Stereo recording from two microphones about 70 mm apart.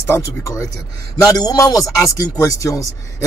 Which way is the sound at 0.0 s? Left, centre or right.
Left.